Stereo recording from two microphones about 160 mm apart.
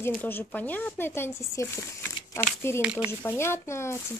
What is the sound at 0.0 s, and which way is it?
Speech, 10° left (ahead or behind).